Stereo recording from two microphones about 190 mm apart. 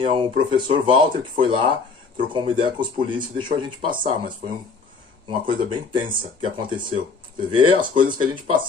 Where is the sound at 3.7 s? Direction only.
45° right (ahead or behind).